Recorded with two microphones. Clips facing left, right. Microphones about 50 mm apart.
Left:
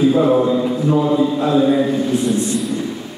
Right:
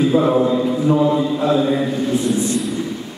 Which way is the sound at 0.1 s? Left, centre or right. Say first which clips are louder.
Left 1 dB; centre.